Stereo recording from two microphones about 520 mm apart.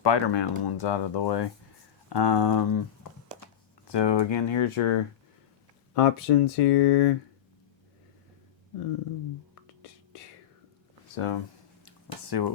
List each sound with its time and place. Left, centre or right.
0.0 s speech: left
5.9 s speech: left
11.1 s speech: left
11.9 s a sound: left